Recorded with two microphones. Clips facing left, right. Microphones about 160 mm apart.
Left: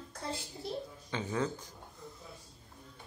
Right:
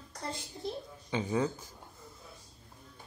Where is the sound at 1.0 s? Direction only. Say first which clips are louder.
Right 4 dB; 15° right (ahead or behind).